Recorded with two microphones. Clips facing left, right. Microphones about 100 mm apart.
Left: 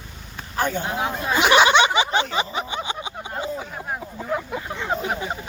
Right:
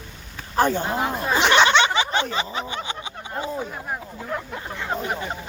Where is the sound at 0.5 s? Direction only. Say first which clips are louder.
Right 4 dB; 35° right (ahead or behind).